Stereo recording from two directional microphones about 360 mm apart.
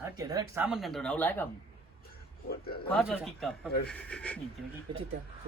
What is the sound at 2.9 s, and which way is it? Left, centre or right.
A man's voice, centre.